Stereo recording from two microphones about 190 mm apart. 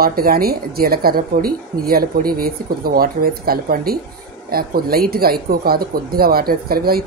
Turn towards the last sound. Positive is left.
turn(degrees=-55)  # may be behind; listen again after turning